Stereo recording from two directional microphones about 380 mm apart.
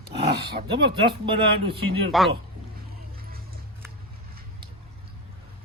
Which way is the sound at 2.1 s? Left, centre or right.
Centre.